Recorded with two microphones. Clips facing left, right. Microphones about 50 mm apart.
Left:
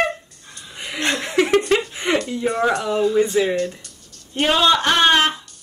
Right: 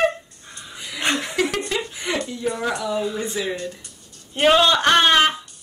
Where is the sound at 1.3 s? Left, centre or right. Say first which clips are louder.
Left 6 dB; left.